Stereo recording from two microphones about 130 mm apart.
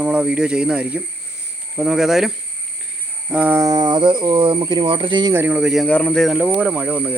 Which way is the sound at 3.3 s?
10° right (ahead or behind).